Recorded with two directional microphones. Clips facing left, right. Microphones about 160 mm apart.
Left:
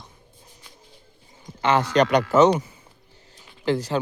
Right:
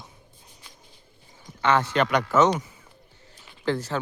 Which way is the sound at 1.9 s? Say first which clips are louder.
Left 4 dB; 35° left (ahead or behind).